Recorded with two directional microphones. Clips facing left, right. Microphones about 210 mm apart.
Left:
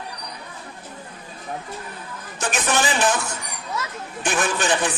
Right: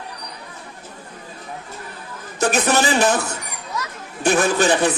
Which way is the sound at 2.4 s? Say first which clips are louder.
Right 5 dB; 35° right (ahead or behind).